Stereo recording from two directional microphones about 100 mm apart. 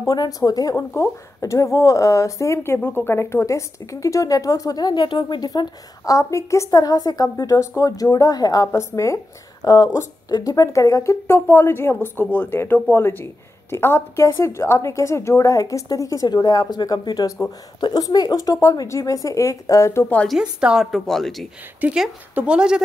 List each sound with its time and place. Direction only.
0.0 s speech: 35° left (ahead or behind)
8.7 s a woman's voice: 30° left (ahead or behind)
20.2 s a woman's voice: 5° right (ahead or behind)